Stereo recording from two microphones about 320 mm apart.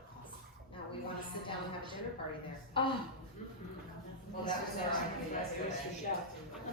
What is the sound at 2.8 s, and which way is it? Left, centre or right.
Speech, centre.